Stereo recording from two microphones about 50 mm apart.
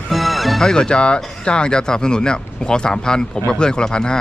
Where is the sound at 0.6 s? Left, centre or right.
Centre.